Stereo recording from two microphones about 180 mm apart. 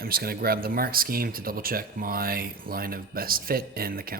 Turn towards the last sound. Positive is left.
turn(degrees=-55)  # may be behind; listen again after turning